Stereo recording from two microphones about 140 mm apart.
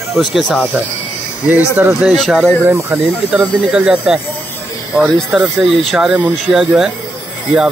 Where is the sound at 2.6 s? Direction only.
20° right (ahead or behind).